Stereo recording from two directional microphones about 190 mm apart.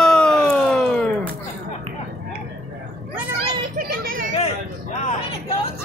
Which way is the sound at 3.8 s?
50° right (ahead or behind).